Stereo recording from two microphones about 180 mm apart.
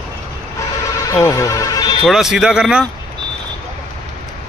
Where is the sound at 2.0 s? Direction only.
Centre (ahead or behind).